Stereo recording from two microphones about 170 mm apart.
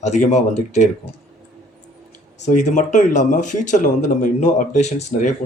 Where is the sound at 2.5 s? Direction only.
45° left (ahead or behind).